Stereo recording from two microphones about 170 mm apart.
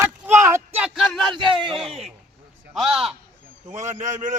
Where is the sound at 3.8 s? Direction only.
45° right (ahead or behind).